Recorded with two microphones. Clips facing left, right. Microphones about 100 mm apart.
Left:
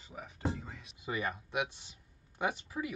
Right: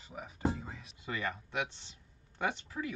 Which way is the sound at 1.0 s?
15° left (ahead or behind).